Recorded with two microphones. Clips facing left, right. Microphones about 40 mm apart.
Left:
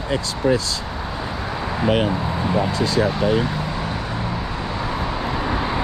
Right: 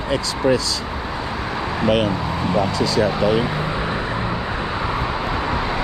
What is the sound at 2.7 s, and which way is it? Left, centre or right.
Speech, left.